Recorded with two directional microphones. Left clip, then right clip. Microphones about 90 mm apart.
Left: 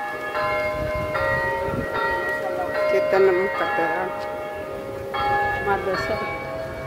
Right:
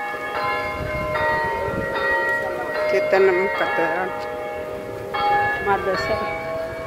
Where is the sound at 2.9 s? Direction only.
15° left (ahead or behind).